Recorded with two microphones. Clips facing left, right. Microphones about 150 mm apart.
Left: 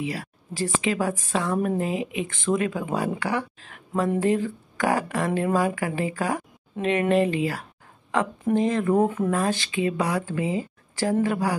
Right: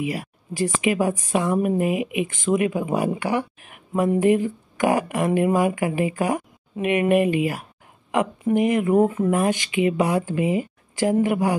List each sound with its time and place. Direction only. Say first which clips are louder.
0.0 s a woman's voice: right 3 dB; 15° right (ahead or behind)
9.0 s speech: right 3 dB; 5° right (ahead or behind)
9.3 s a woman's voice: right 3 dB; 15° right (ahead or behind)